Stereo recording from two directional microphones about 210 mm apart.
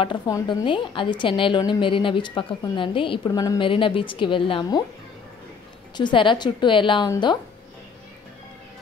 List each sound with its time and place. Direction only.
0.0 s a woman's voice: 20° left (ahead or behind)
5.9 s a woman's voice: 20° left (ahead or behind)